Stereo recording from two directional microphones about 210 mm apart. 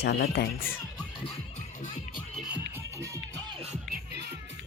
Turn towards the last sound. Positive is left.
turn(degrees=-50)  # may be behind; listen again after turning